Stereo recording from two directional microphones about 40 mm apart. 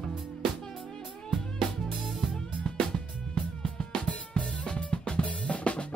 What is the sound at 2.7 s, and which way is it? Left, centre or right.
Music, centre.